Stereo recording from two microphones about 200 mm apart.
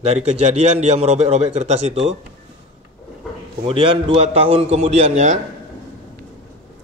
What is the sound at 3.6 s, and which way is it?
A man's voice, 25° right (ahead or behind).